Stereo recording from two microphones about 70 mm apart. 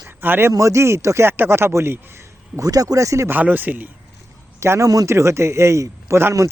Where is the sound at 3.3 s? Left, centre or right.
Right.